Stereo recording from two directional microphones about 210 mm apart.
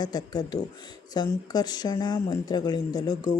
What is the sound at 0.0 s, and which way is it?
Speech, 20° left (ahead or behind).